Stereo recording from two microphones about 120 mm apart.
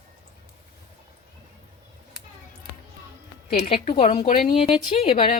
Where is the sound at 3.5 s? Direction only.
50° left (ahead or behind).